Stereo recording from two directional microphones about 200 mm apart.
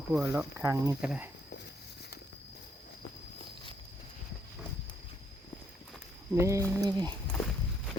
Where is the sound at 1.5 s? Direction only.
55° left (ahead or behind).